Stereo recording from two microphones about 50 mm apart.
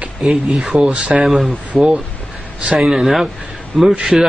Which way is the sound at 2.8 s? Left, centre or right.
Centre.